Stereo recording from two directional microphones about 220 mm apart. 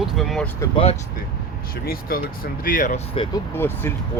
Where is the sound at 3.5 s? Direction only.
10° left (ahead or behind).